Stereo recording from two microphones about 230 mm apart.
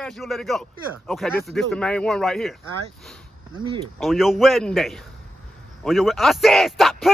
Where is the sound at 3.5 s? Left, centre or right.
Right.